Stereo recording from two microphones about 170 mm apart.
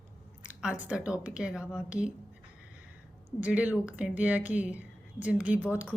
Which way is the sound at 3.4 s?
10° right (ahead or behind).